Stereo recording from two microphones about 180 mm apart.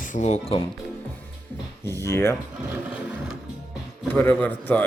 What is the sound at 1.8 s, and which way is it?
Speech, 15° left (ahead or behind).